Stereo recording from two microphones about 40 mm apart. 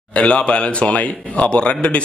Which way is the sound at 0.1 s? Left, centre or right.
Left.